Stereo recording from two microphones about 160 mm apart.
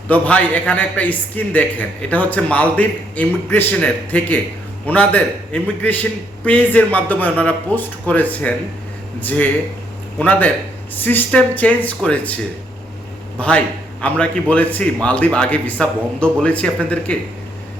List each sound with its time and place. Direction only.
0.1 s a man's voice: 10° left (ahead or behind)
13.4 s a man's voice: 5° left (ahead or behind)